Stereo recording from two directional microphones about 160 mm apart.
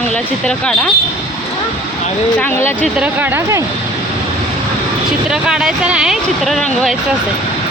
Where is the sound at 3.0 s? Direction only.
10° right (ahead or behind).